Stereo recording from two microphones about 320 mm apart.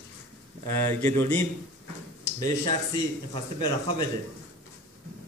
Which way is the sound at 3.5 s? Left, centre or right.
Right.